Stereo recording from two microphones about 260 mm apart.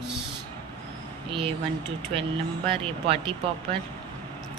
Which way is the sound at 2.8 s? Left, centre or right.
Right.